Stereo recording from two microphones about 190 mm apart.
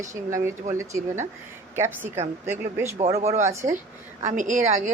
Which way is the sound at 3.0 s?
35° right (ahead or behind).